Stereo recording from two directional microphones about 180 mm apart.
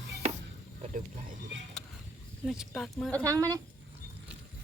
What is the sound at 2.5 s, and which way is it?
Speech, centre (ahead or behind).